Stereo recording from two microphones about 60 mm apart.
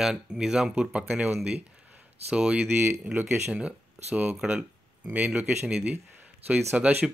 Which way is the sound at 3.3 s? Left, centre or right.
Centre.